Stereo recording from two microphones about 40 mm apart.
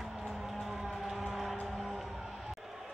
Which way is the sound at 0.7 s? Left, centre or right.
Centre.